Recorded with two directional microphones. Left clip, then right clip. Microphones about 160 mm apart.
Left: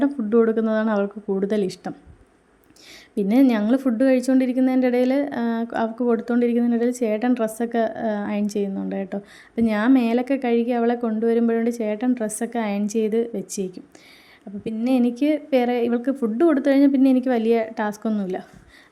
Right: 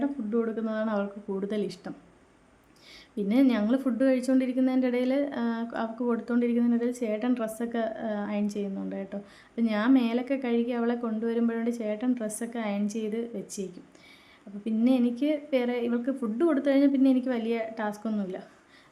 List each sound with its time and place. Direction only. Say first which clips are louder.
0.0 s a woman's voice: left 10 dB; 55° left (ahead or behind)
3.2 s a woman's voice: left 6 dB; 40° left (ahead or behind)